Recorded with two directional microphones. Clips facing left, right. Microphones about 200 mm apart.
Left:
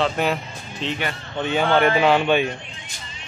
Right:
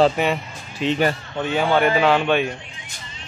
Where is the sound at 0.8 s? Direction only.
10° right (ahead or behind).